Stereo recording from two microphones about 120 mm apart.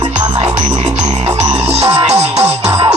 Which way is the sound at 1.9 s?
60° right (ahead or behind).